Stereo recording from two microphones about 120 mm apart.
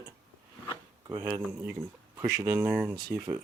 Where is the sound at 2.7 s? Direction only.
10° right (ahead or behind).